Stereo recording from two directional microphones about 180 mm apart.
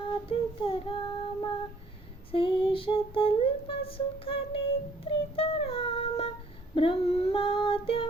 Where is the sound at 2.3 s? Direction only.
30° left (ahead or behind).